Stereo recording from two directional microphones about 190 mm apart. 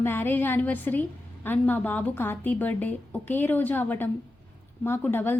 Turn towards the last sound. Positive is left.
turn(degrees=10)  # may be behind; listen again after turning